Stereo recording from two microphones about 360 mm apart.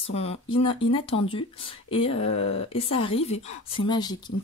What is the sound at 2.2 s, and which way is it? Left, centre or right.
Speech, left.